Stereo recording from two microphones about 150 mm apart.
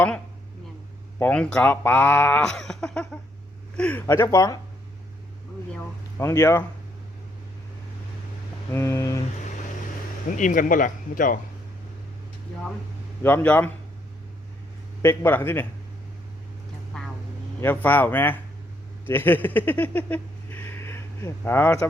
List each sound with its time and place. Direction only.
1.2 s speech: 5° left (ahead or behind); by 4.6 s 25° left (ahead or behind)
6.1 s speech: 20° left (ahead or behind)
8.7 s speech: 15° left (ahead or behind)
10.2 s speech: 60° left (ahead or behind)
13.2 s speech: 10° left (ahead or behind)
15.0 s speech: 15° left (ahead or behind)
16.9 s vehicle: 5° left (ahead or behind)
17.6 s speech: 15° left (ahead or behind)